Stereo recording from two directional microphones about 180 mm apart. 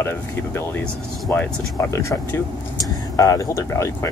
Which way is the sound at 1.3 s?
10° left (ahead or behind).